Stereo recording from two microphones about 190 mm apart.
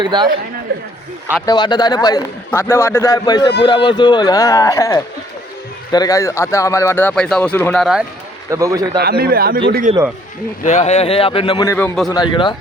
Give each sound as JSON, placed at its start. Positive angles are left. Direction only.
{"t": 0.0, "sound": "a man's voice", "side_deg": -25}
{"t": 1.5, "sound": "a man's voice", "side_deg": 20}
{"t": 8.4, "sound": "a man's voice", "side_deg": -15}
{"t": 9.0, "sound": "speech", "side_deg": -55}
{"t": 9.9, "sound": "speech", "side_deg": -35}
{"t": 10.6, "sound": "a man's voice", "side_deg": 35}